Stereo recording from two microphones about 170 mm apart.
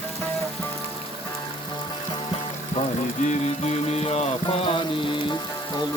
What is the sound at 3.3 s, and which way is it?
Music, 40° left (ahead or behind).